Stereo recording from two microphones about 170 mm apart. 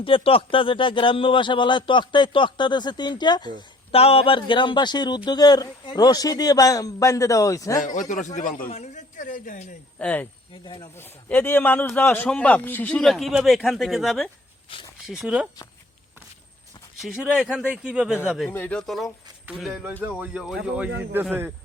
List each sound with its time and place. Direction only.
0.0 s a man's voice: 30° left (ahead or behind)
7.9 s a man's voice: 45° left (ahead or behind)
10.0 s speech: 10° left (ahead or behind)
10.6 s a man's voice: 30° left (ahead or behind)
10.9 s a man's voice: 10° left (ahead or behind)
14.7 s speech: 30° left (ahead or behind)
15.0 s a man's voice: centre (ahead or behind)
17.0 s a man's voice: 5° right (ahead or behind)